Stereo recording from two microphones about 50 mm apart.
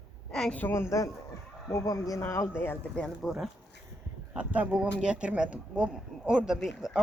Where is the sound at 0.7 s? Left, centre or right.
Left.